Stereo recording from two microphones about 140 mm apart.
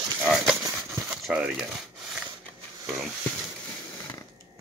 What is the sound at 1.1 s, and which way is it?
Speech, 5° right (ahead or behind).